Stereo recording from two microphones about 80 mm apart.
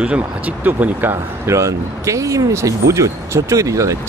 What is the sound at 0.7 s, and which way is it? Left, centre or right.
Speech, right.